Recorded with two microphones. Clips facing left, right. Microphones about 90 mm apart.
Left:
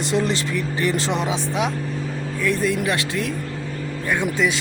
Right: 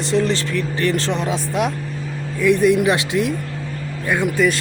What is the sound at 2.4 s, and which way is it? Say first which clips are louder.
Speech: right 7 dB; 15° right (ahead or behind).